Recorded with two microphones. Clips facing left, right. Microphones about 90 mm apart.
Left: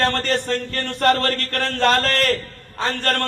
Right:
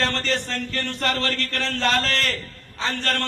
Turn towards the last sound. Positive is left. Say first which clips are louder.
# left 4 dB
turn(degrees=45)  # may be behind; listen again after turning